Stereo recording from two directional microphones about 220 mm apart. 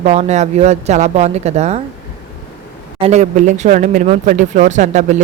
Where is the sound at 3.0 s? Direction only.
30° right (ahead or behind).